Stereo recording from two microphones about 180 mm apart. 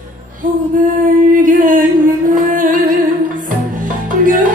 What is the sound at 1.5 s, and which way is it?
Music, 50° right (ahead or behind).